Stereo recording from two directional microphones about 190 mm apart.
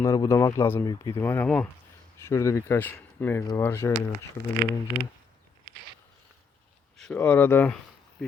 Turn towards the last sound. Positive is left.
turn(degrees=10)  # may be behind; listen again after turning